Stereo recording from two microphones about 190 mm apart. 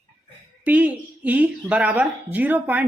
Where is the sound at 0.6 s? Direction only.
10° right (ahead or behind).